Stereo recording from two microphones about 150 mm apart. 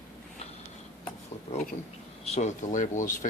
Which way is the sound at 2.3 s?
50° left (ahead or behind).